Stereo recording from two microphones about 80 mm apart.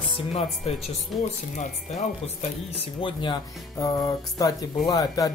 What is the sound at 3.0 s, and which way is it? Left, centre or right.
Speech, left.